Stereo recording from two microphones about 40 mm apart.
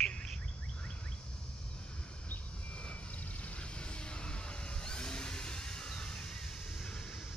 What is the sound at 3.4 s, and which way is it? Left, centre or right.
Vehicle, left.